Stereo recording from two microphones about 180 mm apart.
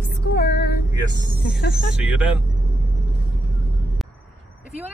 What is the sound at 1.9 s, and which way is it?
Speech, 5° right (ahead or behind).